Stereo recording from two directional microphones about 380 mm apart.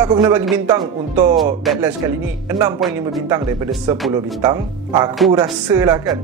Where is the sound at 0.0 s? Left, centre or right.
Centre.